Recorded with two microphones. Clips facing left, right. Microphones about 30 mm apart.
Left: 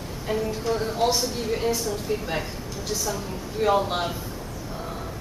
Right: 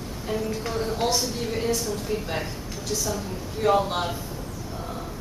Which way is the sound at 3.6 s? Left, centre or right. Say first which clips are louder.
Even; centre.